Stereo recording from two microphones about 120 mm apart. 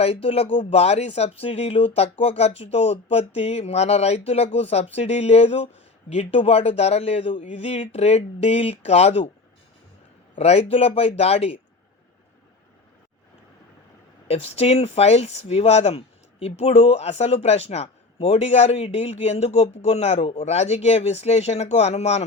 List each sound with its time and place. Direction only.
0.0 s speech: 55° left (ahead or behind)
10.3 s speech: 60° left (ahead or behind)
14.3 s speech: 60° left (ahead or behind)